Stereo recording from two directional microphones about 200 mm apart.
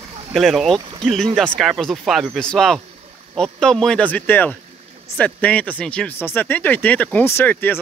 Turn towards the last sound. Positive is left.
turn(degrees=10)  # may be behind; listen again after turning